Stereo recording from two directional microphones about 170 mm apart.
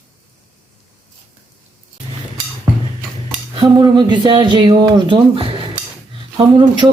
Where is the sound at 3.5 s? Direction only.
25° right (ahead or behind).